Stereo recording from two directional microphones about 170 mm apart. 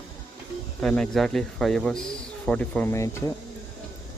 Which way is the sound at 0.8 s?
5° left (ahead or behind).